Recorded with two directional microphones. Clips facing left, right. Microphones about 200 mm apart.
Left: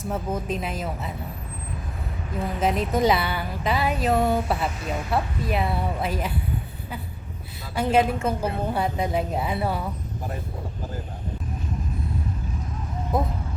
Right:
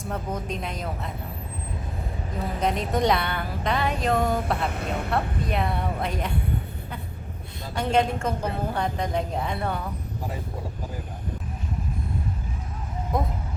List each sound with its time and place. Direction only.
0.0 s a woman's voice: 5° left (ahead or behind)
2.6 s a woman's voice: 5° left (ahead or behind)
4.7 s speech: 60° right (ahead or behind)
5.5 s a woman's voice: 5° left (ahead or behind)
7.8 s a woman's voice: 5° left (ahead or behind)
13.1 s a woman's voice: 5° left (ahead or behind)